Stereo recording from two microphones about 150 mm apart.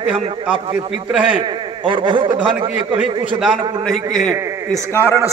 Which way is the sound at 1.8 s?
35° right (ahead or behind).